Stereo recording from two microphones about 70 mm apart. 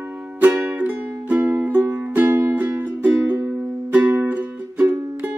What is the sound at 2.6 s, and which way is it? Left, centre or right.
Music, right.